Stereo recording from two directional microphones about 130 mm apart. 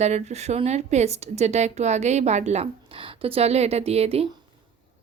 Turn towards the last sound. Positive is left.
turn(degrees=-50)  # may be behind; listen again after turning